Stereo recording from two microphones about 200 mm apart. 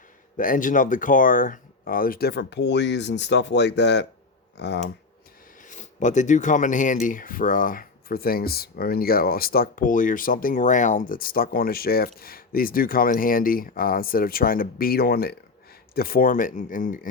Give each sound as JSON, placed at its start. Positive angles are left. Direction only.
{"t": 0.3, "sound": "speech", "side_deg": 45}
{"t": 5.6, "sound": "speech", "side_deg": 40}